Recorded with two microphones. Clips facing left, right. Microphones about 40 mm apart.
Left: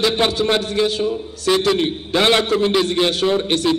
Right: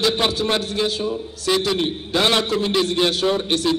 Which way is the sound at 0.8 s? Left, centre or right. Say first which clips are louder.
Left 4 dB; left.